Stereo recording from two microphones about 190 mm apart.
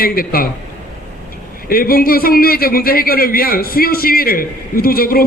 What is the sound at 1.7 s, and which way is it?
A man's voice, 50° left (ahead or behind).